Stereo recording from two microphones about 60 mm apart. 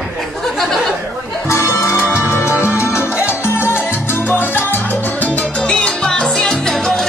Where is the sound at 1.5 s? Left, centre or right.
Left.